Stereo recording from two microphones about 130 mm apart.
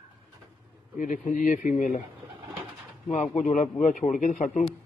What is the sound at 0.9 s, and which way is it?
Speech, 80° left.